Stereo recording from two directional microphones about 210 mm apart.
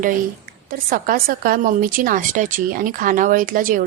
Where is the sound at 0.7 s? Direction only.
40° right (ahead or behind).